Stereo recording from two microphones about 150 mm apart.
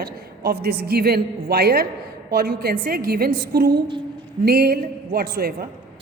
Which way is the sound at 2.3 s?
80° right.